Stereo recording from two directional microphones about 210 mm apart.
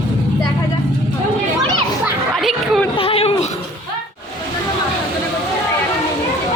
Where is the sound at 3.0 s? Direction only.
25° left (ahead or behind).